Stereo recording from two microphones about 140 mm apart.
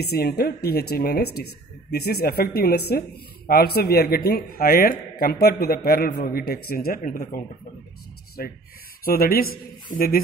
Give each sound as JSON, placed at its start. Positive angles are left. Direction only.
{"t": 0.2, "sound": "a man's voice", "side_deg": 90}